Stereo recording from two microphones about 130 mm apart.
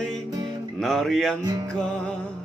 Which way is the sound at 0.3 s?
30° right (ahead or behind).